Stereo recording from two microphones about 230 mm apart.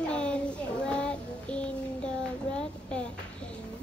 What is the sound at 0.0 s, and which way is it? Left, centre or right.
Child singing, centre.